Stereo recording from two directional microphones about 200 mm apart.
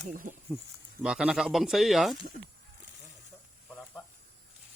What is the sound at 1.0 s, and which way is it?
Speech, 5° right (ahead or behind).